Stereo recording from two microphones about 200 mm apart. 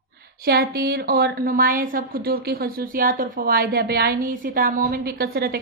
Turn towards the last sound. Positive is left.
turn(degrees=-50)  # may be behind; listen again after turning